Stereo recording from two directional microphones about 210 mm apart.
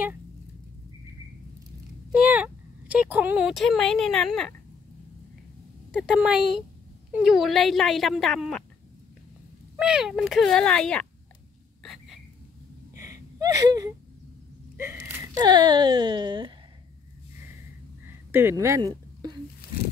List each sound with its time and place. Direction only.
2.1 s speech: 5° right (ahead or behind)
5.9 s speech: 5° right (ahead or behind)
9.8 s speech: 5° right (ahead or behind)
11.8 s a sound: centre (ahead or behind)
12.9 s a sound: 15° right (ahead or behind)
14.8 s speech: 15° right (ahead or behind)
18.3 s speech: 10° right (ahead or behind)